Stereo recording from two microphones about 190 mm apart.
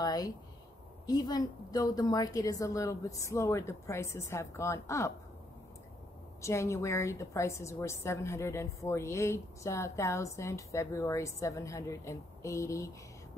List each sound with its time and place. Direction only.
0.0 s a sound: 20° left (ahead or behind)
1.0 s a woman's voice: 20° left (ahead or behind)
6.4 s a woman's voice: 15° left (ahead or behind)